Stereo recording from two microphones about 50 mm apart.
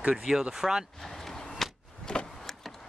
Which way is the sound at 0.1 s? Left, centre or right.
Centre.